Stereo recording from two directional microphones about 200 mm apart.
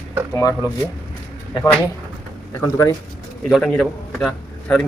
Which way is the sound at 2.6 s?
15° left (ahead or behind).